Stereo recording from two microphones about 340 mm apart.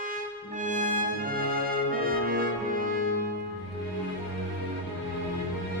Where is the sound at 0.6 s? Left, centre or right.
Right.